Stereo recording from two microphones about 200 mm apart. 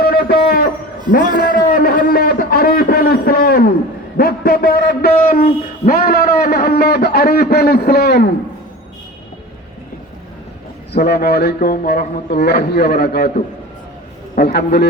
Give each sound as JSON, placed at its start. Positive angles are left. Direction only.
{"t": 0.0, "sound": "a sound", "side_deg": 50}
{"t": 1.4, "sound": "a man's voice", "side_deg": 50}
{"t": 10.9, "sound": "a man's voice", "side_deg": 55}
{"t": 14.3, "sound": "a man's voice", "side_deg": 55}